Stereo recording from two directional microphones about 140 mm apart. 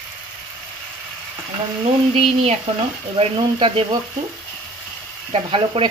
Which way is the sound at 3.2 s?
40° right (ahead or behind).